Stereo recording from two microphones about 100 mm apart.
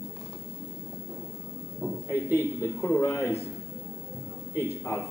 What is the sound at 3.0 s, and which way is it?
Speech, 25° left (ahead or behind).